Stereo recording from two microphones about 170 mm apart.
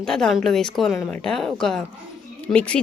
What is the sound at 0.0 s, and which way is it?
A woman's voice, 5° left (ahead or behind).